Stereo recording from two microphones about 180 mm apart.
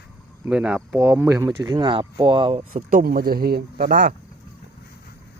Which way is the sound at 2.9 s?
55° right (ahead or behind).